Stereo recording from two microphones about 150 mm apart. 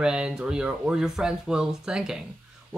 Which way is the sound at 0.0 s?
5° right (ahead or behind).